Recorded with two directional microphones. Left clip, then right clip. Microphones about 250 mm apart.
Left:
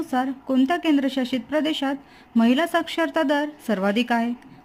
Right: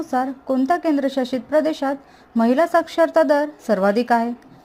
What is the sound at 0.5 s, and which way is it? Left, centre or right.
A woman's voice, centre.